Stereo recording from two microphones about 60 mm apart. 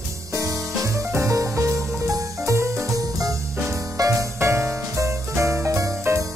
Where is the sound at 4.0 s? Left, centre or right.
Right.